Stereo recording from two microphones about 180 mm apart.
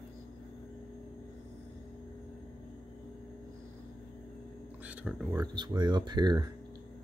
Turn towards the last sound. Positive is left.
turn(degrees=-25)  # may be behind; listen again after turning